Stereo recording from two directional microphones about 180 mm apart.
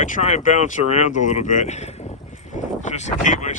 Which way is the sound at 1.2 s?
45° left (ahead or behind).